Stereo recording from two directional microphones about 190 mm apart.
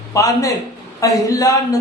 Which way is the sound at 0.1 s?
15° left (ahead or behind).